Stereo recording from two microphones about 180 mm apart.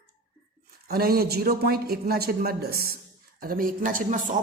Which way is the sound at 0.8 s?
60° right (ahead or behind).